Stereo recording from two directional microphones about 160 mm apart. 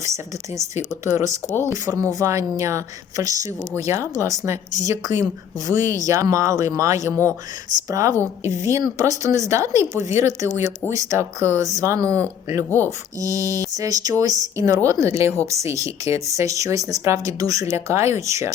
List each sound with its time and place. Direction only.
0.0 s a woman's voice: 20° right (ahead or behind)